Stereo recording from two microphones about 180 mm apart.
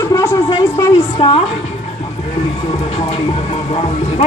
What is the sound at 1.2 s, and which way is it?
Speech, 30° left (ahead or behind).